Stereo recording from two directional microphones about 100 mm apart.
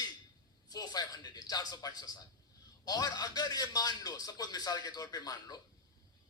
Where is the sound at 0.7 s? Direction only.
40° left (ahead or behind).